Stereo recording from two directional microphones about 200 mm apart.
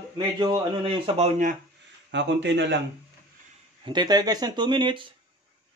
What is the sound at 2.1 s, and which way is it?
Speech, 60° right (ahead or behind).